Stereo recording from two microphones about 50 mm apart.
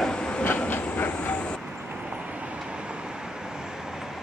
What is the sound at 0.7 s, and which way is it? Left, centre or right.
Train, left.